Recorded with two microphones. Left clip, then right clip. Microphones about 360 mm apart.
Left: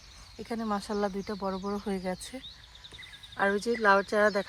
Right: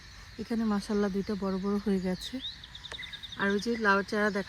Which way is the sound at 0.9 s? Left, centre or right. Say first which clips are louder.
Right 1 dB; left.